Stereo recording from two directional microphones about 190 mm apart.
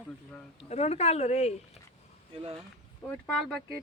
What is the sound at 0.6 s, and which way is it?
Speech, 35° left (ahead or behind).